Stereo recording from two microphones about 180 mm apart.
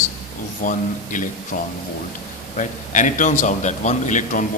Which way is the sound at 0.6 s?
45° left (ahead or behind).